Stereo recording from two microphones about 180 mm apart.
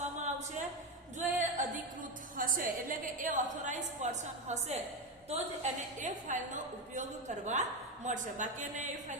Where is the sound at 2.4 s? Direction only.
50° right (ahead or behind).